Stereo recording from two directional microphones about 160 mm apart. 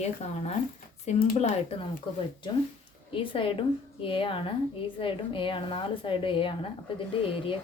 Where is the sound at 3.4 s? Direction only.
30° left (ahead or behind).